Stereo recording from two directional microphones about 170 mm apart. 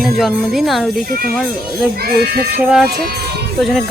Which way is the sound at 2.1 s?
65° right (ahead or behind).